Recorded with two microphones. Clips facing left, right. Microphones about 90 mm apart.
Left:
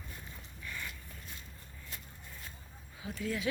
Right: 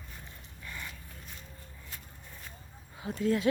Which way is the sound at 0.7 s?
20° right (ahead or behind).